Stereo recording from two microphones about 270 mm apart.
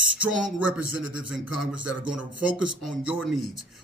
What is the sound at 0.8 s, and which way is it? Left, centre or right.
A man's voice, right.